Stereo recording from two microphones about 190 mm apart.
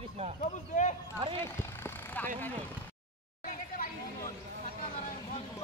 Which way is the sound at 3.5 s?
50° left (ahead or behind).